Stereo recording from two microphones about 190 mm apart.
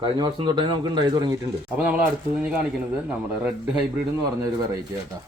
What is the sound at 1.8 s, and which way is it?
Speech, 5° right (ahead or behind).